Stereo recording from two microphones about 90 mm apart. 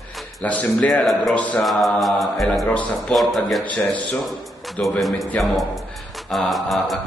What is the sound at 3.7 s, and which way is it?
Speech, 15° left (ahead or behind).